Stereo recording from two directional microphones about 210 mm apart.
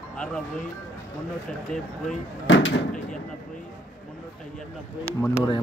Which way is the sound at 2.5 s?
60° left (ahead or behind).